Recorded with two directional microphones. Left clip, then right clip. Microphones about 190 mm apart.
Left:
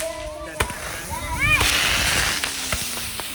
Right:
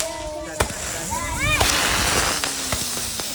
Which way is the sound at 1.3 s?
50° right (ahead or behind).